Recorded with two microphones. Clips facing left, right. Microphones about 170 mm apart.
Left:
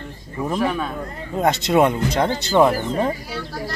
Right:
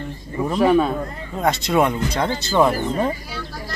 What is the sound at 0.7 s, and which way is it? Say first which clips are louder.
Speech: right 8 dB; 30° right (ahead or behind).